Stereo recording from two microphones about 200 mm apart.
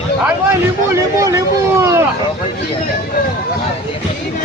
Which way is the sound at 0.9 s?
15° right (ahead or behind).